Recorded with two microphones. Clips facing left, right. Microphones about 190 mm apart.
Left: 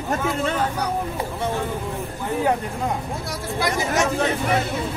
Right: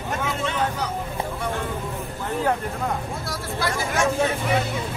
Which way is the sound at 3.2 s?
15° left (ahead or behind).